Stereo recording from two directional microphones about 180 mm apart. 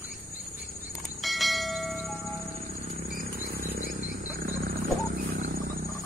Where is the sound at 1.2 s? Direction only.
Centre (ahead or behind).